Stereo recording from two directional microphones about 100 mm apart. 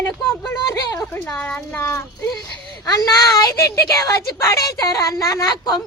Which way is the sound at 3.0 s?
35° left (ahead or behind).